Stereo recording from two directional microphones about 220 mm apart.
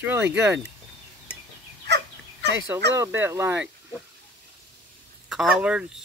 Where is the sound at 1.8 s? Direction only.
50° right (ahead or behind).